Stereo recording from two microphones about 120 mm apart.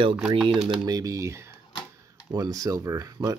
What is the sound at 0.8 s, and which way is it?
Speech, 30° right (ahead or behind).